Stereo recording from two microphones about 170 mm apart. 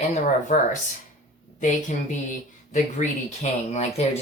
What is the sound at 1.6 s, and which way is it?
Speech, 45° left (ahead or behind).